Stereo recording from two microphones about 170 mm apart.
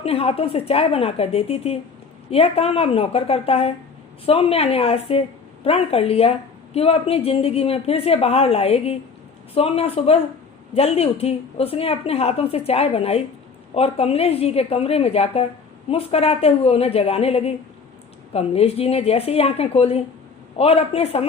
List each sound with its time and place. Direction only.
0.0 s a woman's voice: 35° left (ahead or behind)